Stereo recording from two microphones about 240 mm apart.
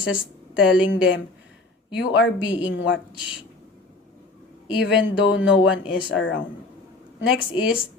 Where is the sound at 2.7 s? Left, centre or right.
Left.